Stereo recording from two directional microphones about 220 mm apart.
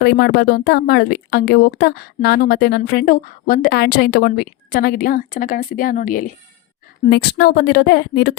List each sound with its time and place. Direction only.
0.0 s a woman's voice: 50° left (ahead or behind)